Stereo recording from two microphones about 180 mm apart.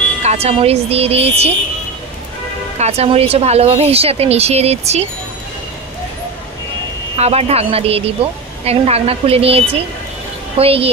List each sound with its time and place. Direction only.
0.2 s a woman's voice: 35° right (ahead or behind)
2.8 s a woman's voice: 35° right (ahead or behind)
7.2 s a woman's voice: 35° right (ahead or behind)